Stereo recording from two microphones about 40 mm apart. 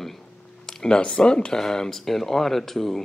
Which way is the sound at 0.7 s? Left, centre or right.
Centre.